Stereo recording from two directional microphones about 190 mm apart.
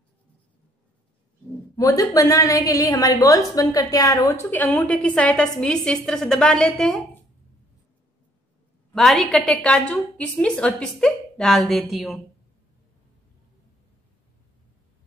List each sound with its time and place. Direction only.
1.8 s a woman's voice: 15° left (ahead or behind)
8.9 s a woman's voice: centre (ahead or behind)